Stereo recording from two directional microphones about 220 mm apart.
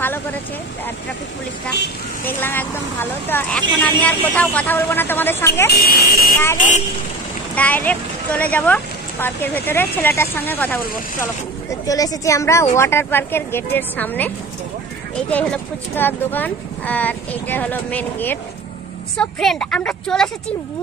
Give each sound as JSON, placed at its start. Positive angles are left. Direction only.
{"t": 0.0, "sound": "a sound", "side_deg": 10}
{"t": 2.2, "sound": "speech", "side_deg": 10}
{"t": 5.7, "sound": "speech", "side_deg": 45}
{"t": 6.3, "sound": "speech", "side_deg": 10}
{"t": 11.8, "sound": "a woman's voice", "side_deg": 15}